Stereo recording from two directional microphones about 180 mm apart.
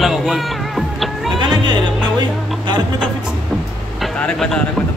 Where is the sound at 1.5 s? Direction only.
25° right (ahead or behind).